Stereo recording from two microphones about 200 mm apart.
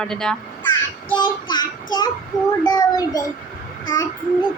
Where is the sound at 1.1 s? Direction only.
20° left (ahead or behind).